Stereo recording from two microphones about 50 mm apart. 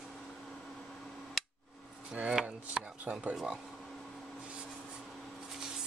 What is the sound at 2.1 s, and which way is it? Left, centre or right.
Chopping, centre.